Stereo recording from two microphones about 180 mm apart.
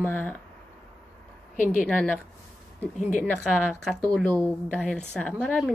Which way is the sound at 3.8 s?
5° left (ahead or behind).